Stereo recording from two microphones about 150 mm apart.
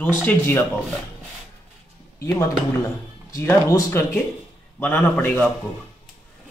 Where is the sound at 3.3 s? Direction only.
20° left (ahead or behind).